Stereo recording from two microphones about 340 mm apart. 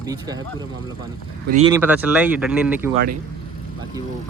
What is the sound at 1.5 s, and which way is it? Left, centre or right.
Speech, centre.